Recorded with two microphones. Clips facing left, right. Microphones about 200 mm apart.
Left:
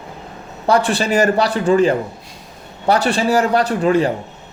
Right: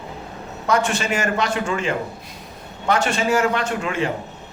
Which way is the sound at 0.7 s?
35° left (ahead or behind).